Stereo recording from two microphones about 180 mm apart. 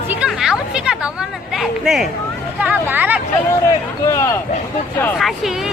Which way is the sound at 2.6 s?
10° right (ahead or behind).